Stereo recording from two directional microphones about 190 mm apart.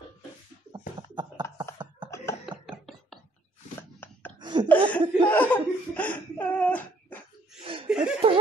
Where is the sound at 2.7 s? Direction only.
Centre (ahead or behind).